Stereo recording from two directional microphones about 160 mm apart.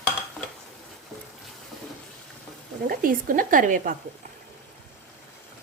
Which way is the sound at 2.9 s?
60° right (ahead or behind).